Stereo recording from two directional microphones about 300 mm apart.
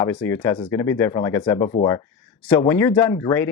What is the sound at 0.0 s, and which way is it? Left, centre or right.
Speech, centre.